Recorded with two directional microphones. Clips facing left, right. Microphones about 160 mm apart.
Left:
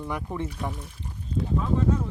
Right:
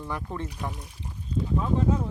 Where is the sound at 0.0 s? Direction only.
15° left (ahead or behind).